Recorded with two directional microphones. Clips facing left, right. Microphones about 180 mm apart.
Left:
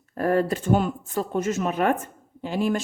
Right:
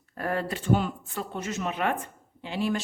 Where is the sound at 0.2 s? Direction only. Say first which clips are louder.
Left 8 dB; 45° left (ahead or behind).